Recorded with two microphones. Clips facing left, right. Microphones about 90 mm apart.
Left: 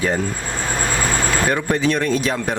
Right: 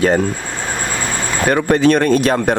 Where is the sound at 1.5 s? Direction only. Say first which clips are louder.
Right 6 dB; 60° right (ahead or behind).